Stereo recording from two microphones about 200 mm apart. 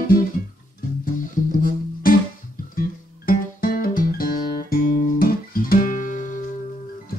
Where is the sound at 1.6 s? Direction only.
45° left (ahead or behind).